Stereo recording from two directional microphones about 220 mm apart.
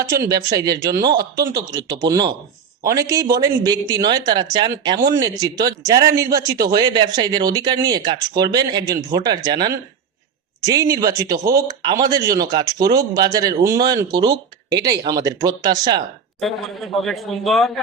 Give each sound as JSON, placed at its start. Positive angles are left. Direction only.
{"t": 0.0, "sound": "speech", "side_deg": -15}
{"t": 16.4, "sound": "a man's voice", "side_deg": 0}